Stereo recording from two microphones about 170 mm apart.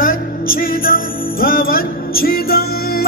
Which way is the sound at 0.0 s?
55° left (ahead or behind).